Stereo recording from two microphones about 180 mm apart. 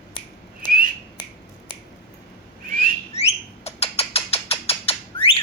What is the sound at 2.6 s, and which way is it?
Bird, 50° right (ahead or behind).